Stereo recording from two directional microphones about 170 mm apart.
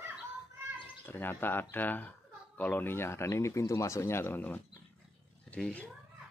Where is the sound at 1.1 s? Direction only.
10° left (ahead or behind).